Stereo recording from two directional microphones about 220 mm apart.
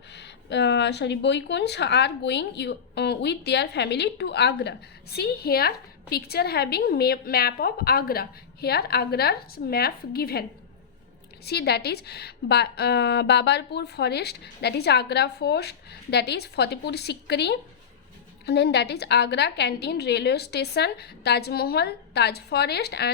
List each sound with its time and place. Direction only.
0.1 s a woman's voice: 50° left (ahead or behind)
11.4 s a woman's voice: 45° left (ahead or behind)